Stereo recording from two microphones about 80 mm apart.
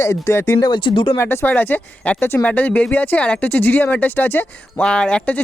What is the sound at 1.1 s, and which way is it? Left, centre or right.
Speech, left.